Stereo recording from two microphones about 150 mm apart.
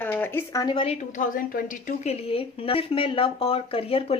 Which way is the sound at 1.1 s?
70° left (ahead or behind).